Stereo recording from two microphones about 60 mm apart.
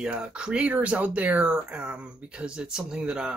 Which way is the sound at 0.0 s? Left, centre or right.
Centre.